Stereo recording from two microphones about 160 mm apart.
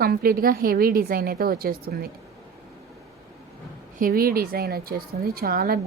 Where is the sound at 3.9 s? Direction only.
65° right (ahead or behind).